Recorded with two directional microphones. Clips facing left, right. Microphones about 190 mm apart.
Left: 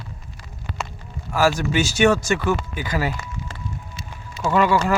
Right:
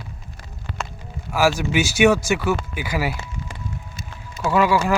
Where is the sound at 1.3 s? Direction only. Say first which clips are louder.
Even; 5° right (ahead or behind).